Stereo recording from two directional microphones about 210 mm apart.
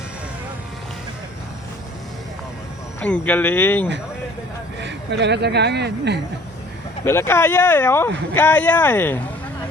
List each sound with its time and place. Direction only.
3.0 s speech: 5° left (ahead or behind)
4.8 s speech: 55° right (ahead or behind)
7.0 s speech: 10° left (ahead or behind)